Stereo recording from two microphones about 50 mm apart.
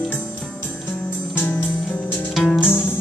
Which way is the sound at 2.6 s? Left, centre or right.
Left.